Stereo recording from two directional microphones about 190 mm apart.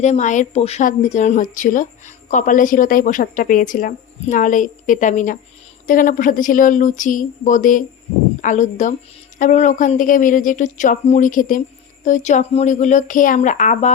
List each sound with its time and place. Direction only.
0.0 s a woman's voice: 40° left (ahead or behind)